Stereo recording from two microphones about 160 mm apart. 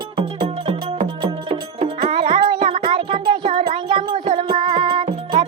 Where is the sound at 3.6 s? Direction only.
30° right (ahead or behind).